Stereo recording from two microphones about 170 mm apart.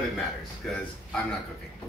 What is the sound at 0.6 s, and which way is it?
Speech, 5° left (ahead or behind).